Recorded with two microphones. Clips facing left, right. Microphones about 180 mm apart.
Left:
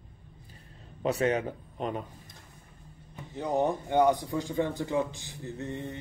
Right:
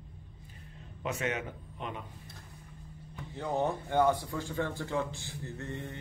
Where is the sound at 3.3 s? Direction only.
15° left (ahead or behind).